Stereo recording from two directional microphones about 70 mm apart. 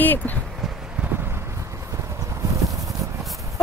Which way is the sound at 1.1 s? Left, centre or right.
Right.